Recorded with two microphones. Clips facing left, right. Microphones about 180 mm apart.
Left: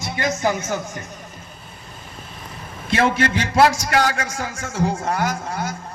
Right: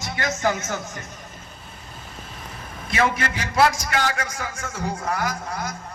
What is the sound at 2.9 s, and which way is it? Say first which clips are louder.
A man's voice: left 4 dB; 30° left (ahead or behind).